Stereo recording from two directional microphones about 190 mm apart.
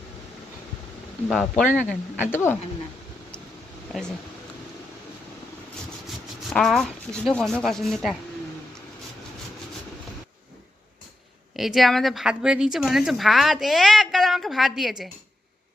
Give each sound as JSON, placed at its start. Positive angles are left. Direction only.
{"t": 1.3, "sound": "a woman's voice", "side_deg": 0}
{"t": 3.9, "sound": "a woman's voice", "side_deg": 0}
{"t": 6.5, "sound": "a woman's voice", "side_deg": 0}
{"t": 11.5, "sound": "a woman's voice", "side_deg": 0}